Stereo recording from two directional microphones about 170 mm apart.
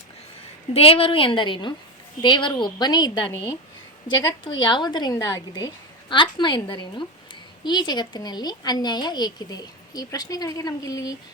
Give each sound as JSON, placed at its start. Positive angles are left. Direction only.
{"t": 0.7, "sound": "a woman's voice", "side_deg": 35}
{"t": 4.6, "sound": "a woman's voice", "side_deg": 25}